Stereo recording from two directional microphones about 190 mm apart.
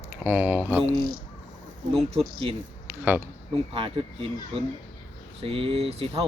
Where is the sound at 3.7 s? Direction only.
30° right (ahead or behind).